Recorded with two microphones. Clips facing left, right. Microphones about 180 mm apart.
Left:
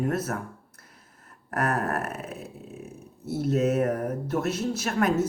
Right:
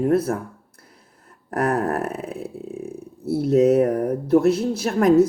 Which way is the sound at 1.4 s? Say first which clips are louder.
Right 6 dB; 35° right (ahead or behind).